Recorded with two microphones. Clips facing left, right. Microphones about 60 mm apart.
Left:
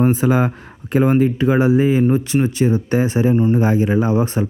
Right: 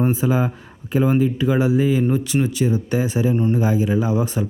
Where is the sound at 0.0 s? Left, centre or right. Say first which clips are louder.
Left 4 dB; left.